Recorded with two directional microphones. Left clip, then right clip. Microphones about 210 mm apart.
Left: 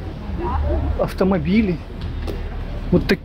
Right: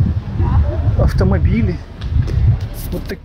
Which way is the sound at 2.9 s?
60° left (ahead or behind).